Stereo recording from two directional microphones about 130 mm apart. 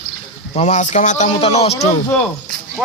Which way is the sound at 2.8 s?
10° right (ahead or behind).